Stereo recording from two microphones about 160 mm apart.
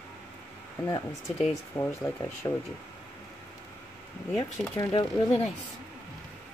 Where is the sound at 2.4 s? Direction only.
20° left (ahead or behind).